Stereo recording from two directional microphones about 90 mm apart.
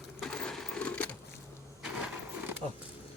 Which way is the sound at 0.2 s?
5° left (ahead or behind).